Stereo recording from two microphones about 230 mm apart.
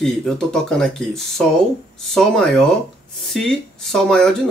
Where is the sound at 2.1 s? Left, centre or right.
Centre.